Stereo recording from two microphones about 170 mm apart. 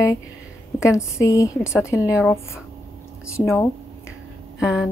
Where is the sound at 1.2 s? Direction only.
20° left (ahead or behind).